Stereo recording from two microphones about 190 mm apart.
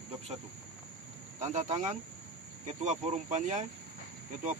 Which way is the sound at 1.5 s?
40° right (ahead or behind).